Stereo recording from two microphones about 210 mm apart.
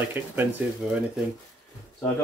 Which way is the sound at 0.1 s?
10° right (ahead or behind).